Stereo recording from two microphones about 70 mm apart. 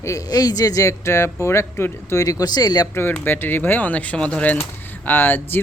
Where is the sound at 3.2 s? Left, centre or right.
Left.